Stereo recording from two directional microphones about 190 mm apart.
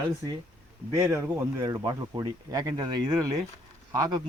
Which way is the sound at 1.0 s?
15° right (ahead or behind).